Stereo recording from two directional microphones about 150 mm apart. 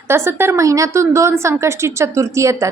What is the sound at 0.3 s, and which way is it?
A woman's voice, 15° right (ahead or behind).